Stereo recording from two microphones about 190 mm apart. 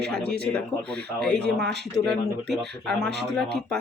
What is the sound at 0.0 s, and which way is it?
Speech, 5° left (ahead or behind).